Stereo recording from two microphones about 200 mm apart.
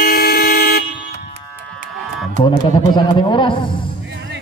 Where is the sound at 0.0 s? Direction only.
50° left (ahead or behind).